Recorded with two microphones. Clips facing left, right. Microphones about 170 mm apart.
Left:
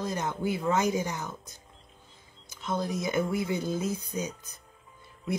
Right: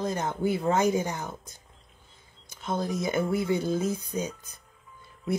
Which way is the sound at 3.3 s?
30° right (ahead or behind).